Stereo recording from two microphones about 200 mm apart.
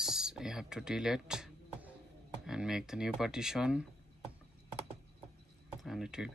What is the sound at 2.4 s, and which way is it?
Speech, 5° right (ahead or behind).